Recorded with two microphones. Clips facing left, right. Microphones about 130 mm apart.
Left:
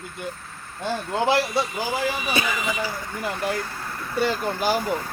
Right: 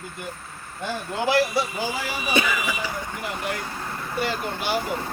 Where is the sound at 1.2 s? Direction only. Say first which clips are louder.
Right 1 dB; 25° left (ahead or behind).